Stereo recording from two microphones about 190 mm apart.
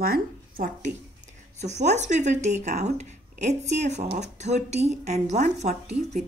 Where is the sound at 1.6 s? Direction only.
35° right (ahead or behind).